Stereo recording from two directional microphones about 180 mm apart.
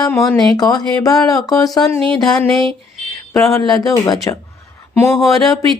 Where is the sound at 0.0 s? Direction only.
20° left (ahead or behind).